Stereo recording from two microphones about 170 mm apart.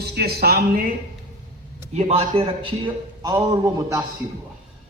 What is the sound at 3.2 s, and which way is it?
Speech, 20° right (ahead or behind).